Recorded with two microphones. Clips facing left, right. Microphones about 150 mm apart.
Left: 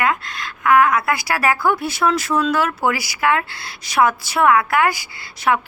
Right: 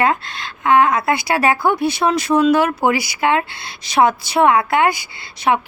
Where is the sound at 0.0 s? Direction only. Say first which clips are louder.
Right 3 dB; 30° right (ahead or behind).